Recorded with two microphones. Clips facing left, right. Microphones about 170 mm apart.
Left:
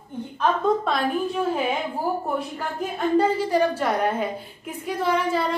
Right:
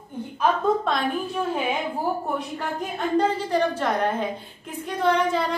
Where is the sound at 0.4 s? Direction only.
Centre (ahead or behind).